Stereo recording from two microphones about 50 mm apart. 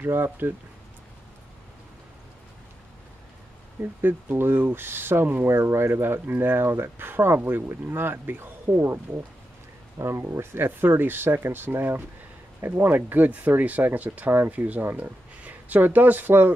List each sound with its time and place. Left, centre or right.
0.0 s speech: right
4.0 s speech: right
5.5 s speech: right